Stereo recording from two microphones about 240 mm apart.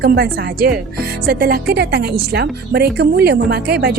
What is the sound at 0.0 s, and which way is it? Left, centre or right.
Speech, right.